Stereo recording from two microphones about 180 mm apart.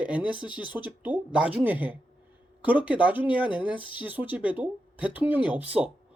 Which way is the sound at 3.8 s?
25° left (ahead or behind).